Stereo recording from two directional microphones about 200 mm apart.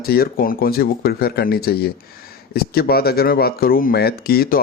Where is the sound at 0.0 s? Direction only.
50° left (ahead or behind).